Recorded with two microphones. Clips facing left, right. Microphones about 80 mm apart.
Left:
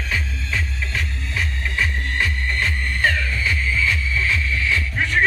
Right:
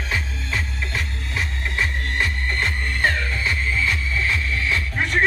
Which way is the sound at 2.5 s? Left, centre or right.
Right.